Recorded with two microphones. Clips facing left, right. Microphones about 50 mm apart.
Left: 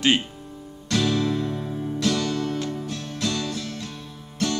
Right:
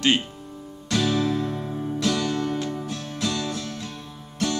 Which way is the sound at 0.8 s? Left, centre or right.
Centre.